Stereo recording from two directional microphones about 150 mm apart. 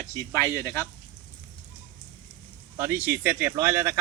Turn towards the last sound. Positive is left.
turn(degrees=-15)  # may be behind; listen again after turning